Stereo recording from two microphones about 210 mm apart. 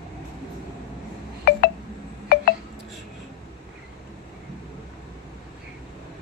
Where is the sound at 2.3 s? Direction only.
45° left (ahead or behind).